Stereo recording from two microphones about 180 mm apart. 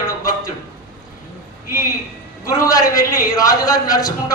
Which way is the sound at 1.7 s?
20° left (ahead or behind).